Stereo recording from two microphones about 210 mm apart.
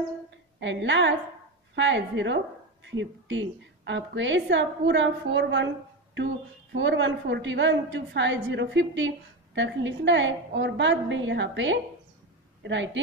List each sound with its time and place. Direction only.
0.6 s a woman's voice: 60° right (ahead or behind)